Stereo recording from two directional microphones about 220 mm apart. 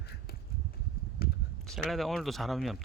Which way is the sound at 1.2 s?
45° left (ahead or behind).